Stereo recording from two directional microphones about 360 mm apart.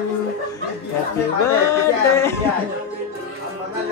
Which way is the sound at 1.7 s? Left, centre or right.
Centre.